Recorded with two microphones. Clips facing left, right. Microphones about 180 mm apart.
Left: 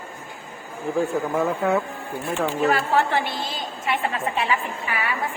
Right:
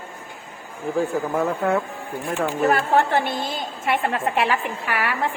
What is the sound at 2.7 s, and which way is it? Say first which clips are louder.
A woman's voice: right 2 dB; 50° right (ahead or behind).